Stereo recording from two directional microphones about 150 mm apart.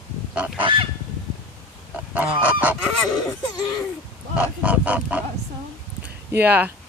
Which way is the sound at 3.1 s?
25° left (ahead or behind).